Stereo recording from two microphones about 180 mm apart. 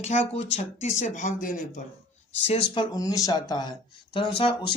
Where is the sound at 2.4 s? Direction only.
30° left (ahead or behind).